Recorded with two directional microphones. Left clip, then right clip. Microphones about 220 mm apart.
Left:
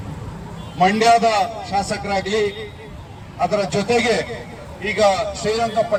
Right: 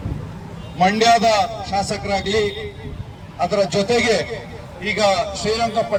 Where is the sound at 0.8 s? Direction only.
40° right (ahead or behind).